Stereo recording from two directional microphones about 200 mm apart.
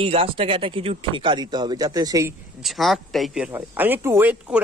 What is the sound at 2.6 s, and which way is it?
Speech, centre (ahead or behind).